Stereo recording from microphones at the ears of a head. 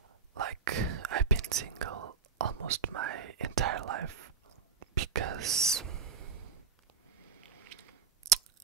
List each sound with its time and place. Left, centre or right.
0.3 s whispering: right
7.6 s biting: right